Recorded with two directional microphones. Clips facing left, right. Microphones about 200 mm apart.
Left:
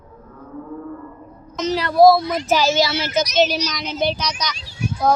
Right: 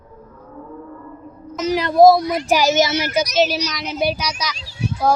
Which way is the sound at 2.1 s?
15° right (ahead or behind).